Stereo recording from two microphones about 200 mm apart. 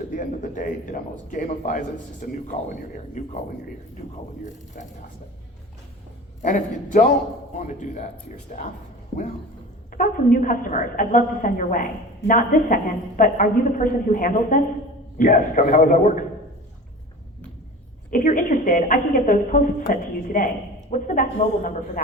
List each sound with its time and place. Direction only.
0.1 s a woman's voice: 40° left (ahead or behind)
6.4 s a woman's voice: 40° left (ahead or behind)
9.9 s a woman's voice: 45° left (ahead or behind)
18.1 s a woman's voice: 40° left (ahead or behind)